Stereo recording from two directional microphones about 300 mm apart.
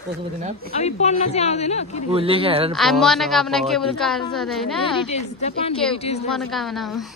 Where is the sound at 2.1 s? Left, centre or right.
Centre.